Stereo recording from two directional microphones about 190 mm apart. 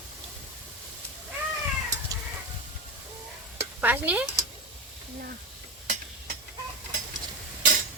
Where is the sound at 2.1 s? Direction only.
20° right (ahead or behind).